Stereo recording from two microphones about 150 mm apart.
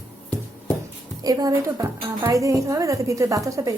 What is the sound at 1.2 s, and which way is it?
A woman's voice, 25° right (ahead or behind).